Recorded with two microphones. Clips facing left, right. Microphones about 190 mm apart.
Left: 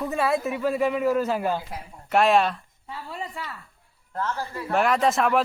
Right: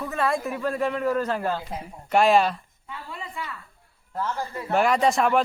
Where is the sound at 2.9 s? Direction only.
40° left (ahead or behind).